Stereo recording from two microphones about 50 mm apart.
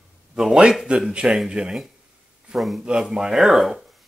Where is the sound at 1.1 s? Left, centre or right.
Centre.